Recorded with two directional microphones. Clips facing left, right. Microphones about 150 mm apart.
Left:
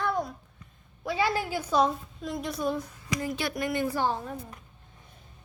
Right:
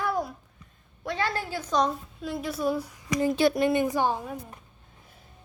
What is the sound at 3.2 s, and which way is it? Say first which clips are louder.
Speech: right 10 dB; 25° right (ahead or behind).